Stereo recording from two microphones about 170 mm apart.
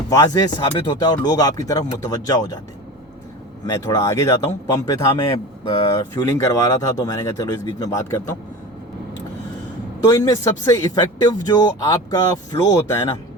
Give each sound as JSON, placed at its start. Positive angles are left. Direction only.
{"t": 0.1, "sound": "speech", "side_deg": 25}
{"t": 3.7, "sound": "speech", "side_deg": 20}
{"t": 10.1, "sound": "speech", "side_deg": 20}